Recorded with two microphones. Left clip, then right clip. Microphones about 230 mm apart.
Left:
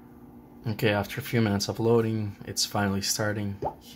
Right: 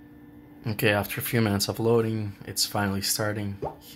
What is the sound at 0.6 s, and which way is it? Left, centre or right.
Speech, centre.